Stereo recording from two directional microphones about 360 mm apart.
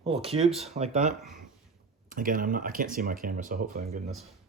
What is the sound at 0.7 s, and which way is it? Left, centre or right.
Speech, centre.